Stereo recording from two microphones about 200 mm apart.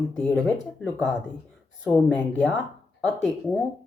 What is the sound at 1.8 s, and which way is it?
Speech, 5° left (ahead or behind).